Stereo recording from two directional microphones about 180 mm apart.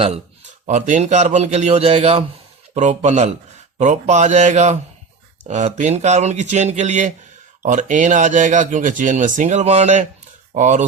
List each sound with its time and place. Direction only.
0.7 s speech: 45° right (ahead or behind)